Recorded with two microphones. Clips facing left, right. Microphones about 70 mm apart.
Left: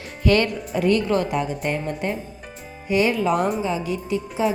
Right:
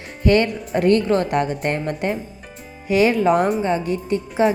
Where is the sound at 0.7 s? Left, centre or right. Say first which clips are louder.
Right 3 dB; right.